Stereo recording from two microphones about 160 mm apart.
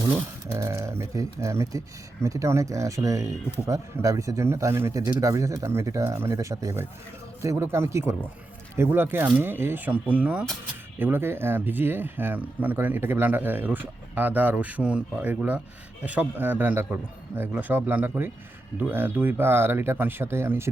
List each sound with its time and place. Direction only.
0.5 s speech: 20° right (ahead or behind)